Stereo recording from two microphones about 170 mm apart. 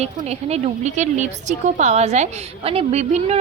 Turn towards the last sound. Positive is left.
turn(degrees=-40)  # may be behind; listen again after turning